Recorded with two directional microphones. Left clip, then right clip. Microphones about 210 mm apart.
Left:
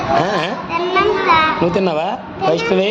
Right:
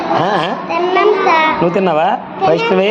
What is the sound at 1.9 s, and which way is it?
Speech, centre (ahead or behind).